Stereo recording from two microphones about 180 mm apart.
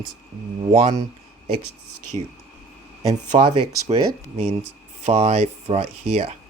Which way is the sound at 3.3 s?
35° right (ahead or behind).